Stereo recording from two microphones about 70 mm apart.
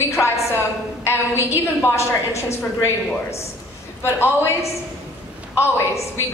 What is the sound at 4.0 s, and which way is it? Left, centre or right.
A woman's voice, left.